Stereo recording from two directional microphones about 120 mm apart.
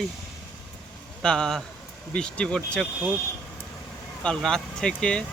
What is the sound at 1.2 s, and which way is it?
Speech, 5° left (ahead or behind).